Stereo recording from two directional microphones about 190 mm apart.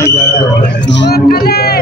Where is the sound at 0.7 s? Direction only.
65° left (ahead or behind).